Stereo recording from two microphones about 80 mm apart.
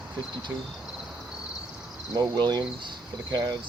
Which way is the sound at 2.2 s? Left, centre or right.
Right.